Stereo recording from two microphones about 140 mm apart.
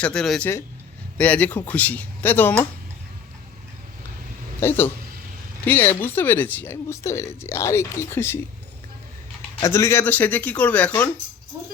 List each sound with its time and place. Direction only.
0.0 s speech: 5° left (ahead or behind)
4.6 s speech: 15° left (ahead or behind)
9.6 s speech: 20° left (ahead or behind)